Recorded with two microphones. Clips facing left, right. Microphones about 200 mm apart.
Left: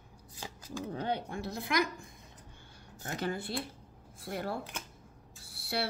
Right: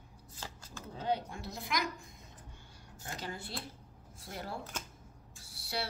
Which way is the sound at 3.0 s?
60° left (ahead or behind).